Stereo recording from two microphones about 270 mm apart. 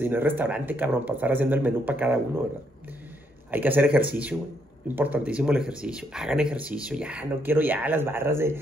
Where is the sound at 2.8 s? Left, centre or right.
Centre.